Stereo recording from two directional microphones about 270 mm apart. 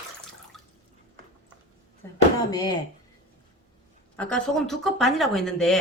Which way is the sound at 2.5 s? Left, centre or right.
Centre.